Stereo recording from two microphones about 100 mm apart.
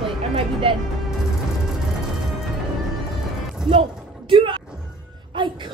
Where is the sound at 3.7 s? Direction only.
60° right (ahead or behind).